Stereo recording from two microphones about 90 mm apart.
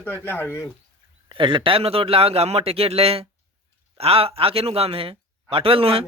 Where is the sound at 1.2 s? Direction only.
65° right (ahead or behind).